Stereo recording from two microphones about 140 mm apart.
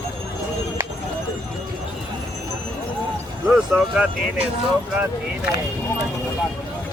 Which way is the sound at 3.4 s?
5° right (ahead or behind).